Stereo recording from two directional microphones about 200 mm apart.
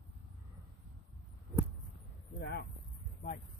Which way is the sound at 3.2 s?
50° left (ahead or behind).